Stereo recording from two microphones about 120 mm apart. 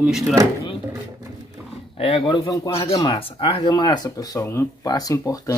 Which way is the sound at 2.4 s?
30° left (ahead or behind).